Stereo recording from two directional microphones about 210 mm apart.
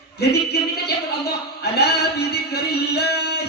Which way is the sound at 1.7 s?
50° left (ahead or behind).